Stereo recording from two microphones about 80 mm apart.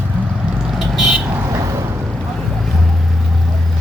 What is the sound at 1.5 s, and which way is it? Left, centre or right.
Vehicle, right.